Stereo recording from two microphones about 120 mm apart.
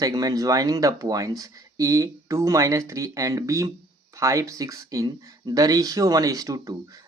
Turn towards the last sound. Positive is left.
turn(degrees=-30)  # may be behind; listen again after turning